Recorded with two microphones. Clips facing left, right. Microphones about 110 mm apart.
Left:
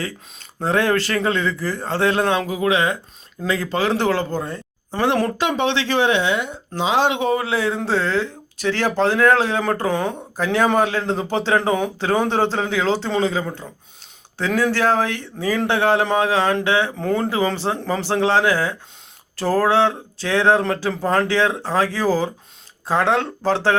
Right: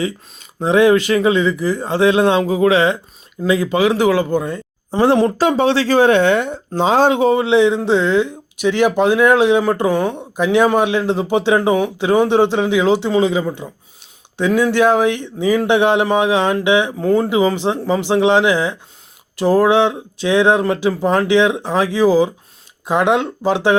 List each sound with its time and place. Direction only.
0.6 s speech: 15° right (ahead or behind)
3.4 s speech: 15° right (ahead or behind)
5.4 s speech: 40° right (ahead or behind); by 16.9 s 15° right (ahead or behind)
17.0 s speech: 5° right (ahead or behind)